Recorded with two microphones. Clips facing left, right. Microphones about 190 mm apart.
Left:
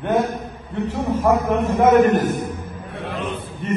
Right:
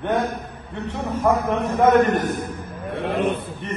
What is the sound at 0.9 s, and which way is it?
A man's voice, centre (ahead or behind).